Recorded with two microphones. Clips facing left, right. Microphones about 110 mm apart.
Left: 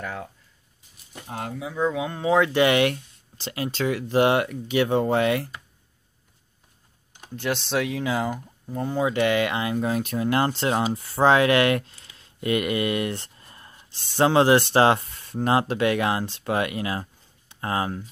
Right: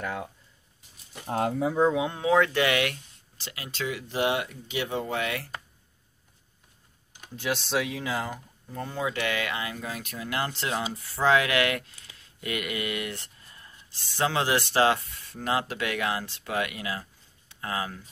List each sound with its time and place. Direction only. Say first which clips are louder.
0.0 s speech: even; 10° right (ahead or behind)
2.0 s speech: even; 15° right (ahead or behind)
2.2 s speech: left 3 dB; 15° left (ahead or behind)
2.6 s speech: left 6 dB; 30° left (ahead or behind); by 5.2 s 50° left (ahead or behind)
7.3 s speech: left 3 dB; 5° right (ahead or behind)
8.7 s speech: left 7 dB; 20° left (ahead or behind)